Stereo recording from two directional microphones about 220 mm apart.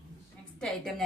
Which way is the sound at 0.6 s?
Centre (ahead or behind).